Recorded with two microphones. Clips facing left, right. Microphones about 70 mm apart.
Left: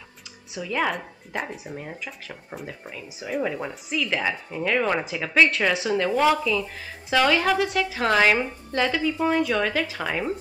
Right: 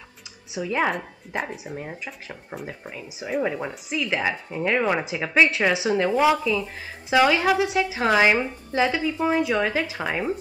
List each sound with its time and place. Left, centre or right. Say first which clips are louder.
0.6 s speech: right 2 dB; centre
0.9 s speech: right 2 dB; centre